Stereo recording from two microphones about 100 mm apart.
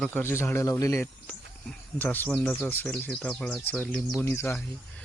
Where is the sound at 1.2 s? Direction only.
15° left (ahead or behind).